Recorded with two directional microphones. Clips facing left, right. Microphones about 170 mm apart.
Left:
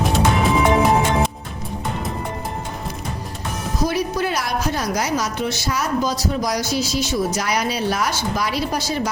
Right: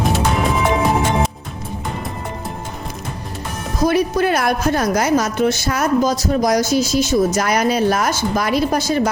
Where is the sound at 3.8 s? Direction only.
55° right (ahead or behind).